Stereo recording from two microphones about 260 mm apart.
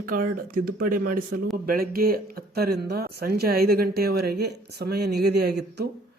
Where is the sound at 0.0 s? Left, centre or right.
Right.